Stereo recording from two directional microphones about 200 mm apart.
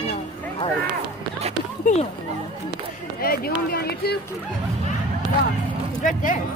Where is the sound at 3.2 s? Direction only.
50° left (ahead or behind).